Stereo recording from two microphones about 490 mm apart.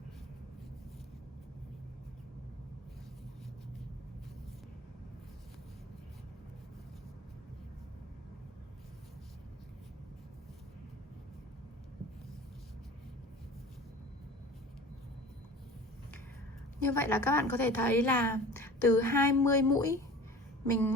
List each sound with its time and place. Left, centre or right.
16.8 s a woman's voice: centre